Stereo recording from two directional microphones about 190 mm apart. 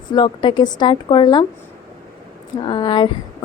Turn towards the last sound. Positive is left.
turn(degrees=25)  # may be behind; listen again after turning